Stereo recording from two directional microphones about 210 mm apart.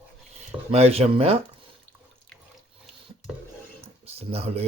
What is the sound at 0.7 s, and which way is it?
Speech, 30° right (ahead or behind).